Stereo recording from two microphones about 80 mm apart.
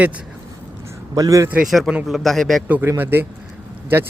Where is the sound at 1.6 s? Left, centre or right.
Centre.